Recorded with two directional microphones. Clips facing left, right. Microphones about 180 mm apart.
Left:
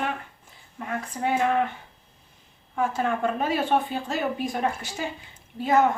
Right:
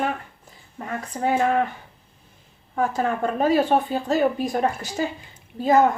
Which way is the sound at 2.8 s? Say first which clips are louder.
Right 2 dB; 40° right (ahead or behind).